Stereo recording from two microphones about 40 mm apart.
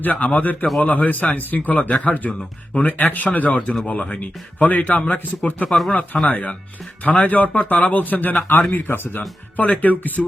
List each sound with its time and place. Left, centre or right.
0.0 s speech: left
5.6 s speech: centre
6.2 s speech: left